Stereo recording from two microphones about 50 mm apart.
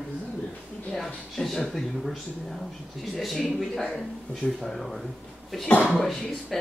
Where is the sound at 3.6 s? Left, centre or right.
Centre.